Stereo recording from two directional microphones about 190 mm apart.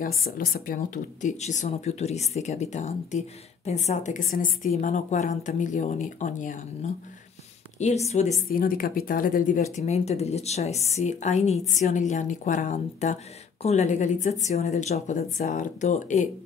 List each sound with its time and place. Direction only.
0.2 s speech: 50° left (ahead or behind)
8.5 s speech: 50° left (ahead or behind)